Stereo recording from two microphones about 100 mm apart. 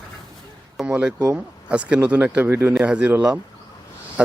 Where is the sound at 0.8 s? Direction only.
10° right (ahead or behind).